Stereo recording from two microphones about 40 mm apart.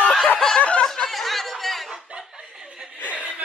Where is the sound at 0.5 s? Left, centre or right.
Left.